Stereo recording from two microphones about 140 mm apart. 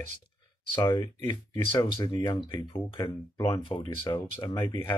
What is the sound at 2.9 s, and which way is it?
Speech, 35° left (ahead or behind).